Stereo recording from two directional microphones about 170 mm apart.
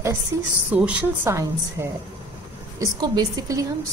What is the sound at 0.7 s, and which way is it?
A woman's voice, 5° right (ahead or behind).